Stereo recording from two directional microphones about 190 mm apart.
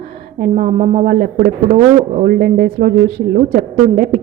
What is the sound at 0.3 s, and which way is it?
A woman's voice, 45° right (ahead or behind).